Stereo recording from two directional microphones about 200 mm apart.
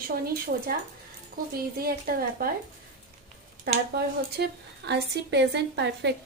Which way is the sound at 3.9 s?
55° right (ahead or behind).